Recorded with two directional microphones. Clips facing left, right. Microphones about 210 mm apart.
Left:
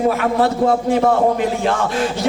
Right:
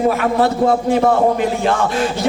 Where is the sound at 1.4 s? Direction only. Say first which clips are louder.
Right 1 dB; 15° right (ahead or behind).